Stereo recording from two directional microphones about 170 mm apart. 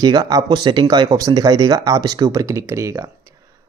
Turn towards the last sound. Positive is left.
turn(degrees=-15)  # may be behind; listen again after turning